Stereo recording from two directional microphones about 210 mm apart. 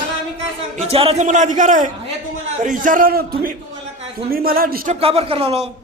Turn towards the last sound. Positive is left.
turn(degrees=-30)  # may be behind; listen again after turning